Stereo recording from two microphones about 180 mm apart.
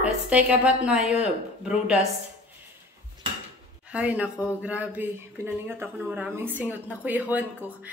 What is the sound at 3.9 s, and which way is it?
Speech, 5° right (ahead or behind).